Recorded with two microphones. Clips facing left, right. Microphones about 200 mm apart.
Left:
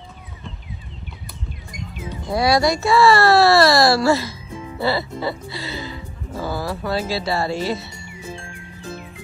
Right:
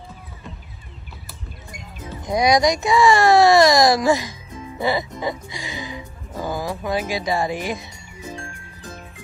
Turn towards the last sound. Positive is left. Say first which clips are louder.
# left 1 dB
turn(degrees=-15)  # may be behind; listen again after turning